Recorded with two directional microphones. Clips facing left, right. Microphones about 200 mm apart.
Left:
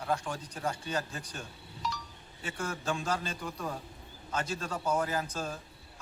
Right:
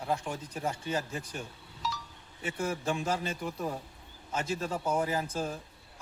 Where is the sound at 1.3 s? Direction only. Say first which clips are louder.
Right 3 dB; 5° right (ahead or behind).